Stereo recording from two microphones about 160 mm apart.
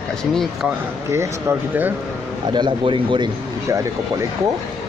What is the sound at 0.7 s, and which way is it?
Speech, 15° right (ahead or behind).